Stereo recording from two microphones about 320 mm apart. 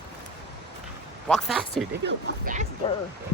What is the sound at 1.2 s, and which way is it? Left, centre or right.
Speech, centre.